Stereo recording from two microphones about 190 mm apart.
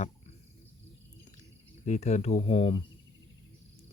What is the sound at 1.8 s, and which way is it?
Speech, 35° left (ahead or behind).